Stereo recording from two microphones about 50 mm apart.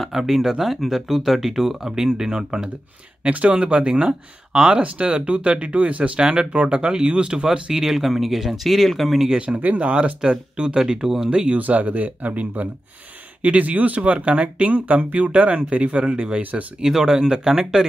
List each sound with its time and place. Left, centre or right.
0.1 s speech: centre
3.3 s speech: right; by 9.4 s centre
9.6 s speech: right; by 11.2 s centre
11.2 s speech: right
16.8 s speech: centre